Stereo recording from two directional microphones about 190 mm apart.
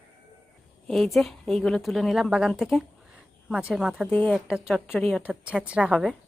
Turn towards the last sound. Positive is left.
turn(degrees=-5)  # may be behind; listen again after turning